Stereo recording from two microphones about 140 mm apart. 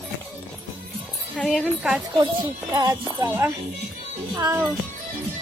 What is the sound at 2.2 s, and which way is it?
Speech, 35° right (ahead or behind).